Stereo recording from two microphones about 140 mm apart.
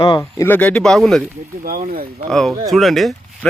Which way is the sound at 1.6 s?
90° right.